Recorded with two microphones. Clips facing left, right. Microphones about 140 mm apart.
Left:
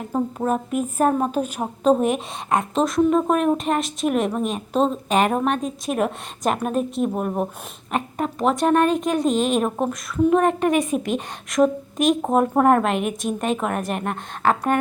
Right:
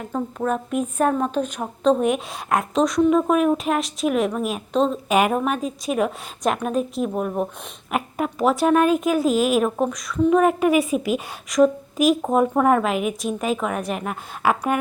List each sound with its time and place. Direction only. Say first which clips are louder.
0.1 s speech: left 2 dB; 15° left (ahead or behind)
0.5 s a woman's voice: left 1 dB; 5° left (ahead or behind)